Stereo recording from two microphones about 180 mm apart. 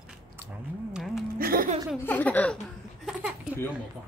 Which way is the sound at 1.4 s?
55° right (ahead or behind).